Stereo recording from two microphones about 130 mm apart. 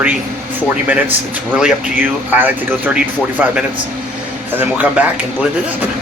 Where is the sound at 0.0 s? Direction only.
10° right (ahead or behind).